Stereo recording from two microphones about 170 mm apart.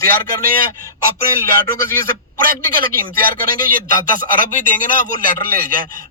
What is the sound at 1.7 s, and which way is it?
Speech, 15° left (ahead or behind).